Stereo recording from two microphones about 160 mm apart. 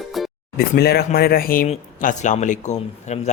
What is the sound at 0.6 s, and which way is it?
Speech, 80° left.